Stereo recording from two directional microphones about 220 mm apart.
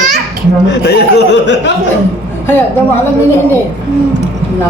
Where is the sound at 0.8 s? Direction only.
50° left (ahead or behind).